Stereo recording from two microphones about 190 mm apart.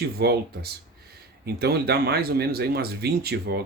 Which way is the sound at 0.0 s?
55° right (ahead or behind).